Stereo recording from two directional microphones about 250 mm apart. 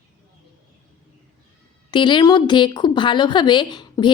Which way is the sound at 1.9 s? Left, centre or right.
Centre.